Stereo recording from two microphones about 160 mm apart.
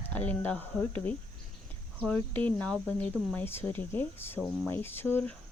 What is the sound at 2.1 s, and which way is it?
Speech, 10° left (ahead or behind).